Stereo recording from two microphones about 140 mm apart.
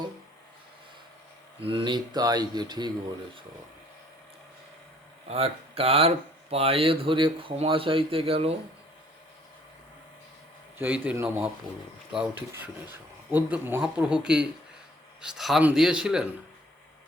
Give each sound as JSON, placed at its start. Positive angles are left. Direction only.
{"t": 1.6, "sound": "speech", "side_deg": -35}
{"t": 5.3, "sound": "speech", "side_deg": -45}
{"t": 10.8, "sound": "speech", "side_deg": -10}
{"t": 12.9, "sound": "a man's voice", "side_deg": -15}